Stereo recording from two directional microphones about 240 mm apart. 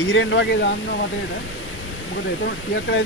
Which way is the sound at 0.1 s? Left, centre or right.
Left.